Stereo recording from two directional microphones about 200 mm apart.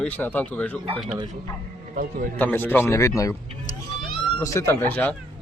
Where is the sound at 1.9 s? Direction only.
45° right (ahead or behind).